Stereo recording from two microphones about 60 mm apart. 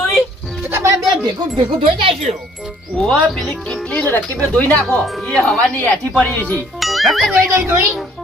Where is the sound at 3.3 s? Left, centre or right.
Centre.